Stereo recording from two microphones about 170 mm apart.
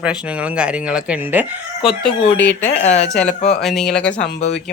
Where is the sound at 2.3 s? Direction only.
10° left (ahead or behind).